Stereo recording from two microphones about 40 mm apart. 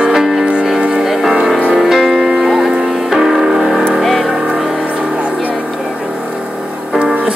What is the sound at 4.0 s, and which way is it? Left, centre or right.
Vehicle, centre.